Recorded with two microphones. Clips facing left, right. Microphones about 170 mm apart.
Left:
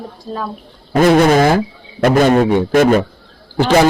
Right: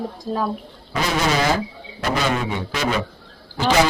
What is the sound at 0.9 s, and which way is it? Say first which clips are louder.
A man's voice: left 11 dB; 55° left (ahead or behind).